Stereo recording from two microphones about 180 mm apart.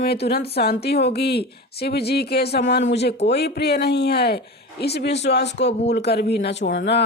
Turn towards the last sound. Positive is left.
turn(degrees=70)  # may be behind; listen again after turning